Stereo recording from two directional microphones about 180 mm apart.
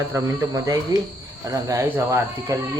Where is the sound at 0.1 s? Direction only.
20° right (ahead or behind).